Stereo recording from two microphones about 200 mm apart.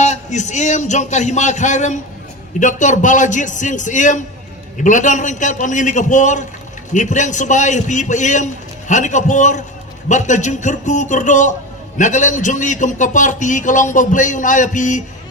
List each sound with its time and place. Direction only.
0.0 s a man's voice: 35° left (ahead or behind)